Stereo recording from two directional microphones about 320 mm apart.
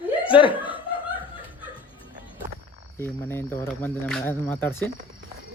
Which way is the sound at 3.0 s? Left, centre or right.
Centre.